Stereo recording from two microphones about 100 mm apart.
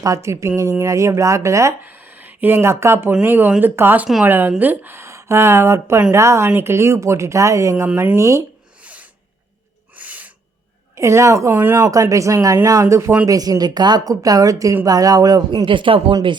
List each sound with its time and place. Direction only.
0.0 s speech: 30° right (ahead or behind)
1.8 s a woman's voice: 15° right (ahead or behind)
8.8 s rub: 15° right (ahead or behind)
9.9 s owl: 15° right (ahead or behind)
10.9 s speech: 30° right (ahead or behind)
15.6 s speech: 60° right (ahead or behind)